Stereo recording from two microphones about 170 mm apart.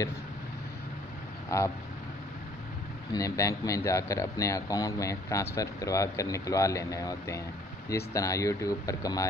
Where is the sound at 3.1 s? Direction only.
20° left (ahead or behind).